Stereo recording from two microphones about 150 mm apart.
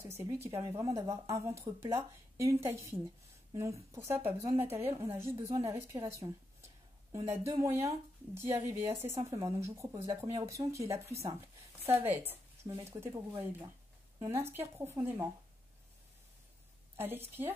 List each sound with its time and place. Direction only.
0.0 s a woman's voice: 15° right (ahead or behind)
16.9 s speech: 15° right (ahead or behind)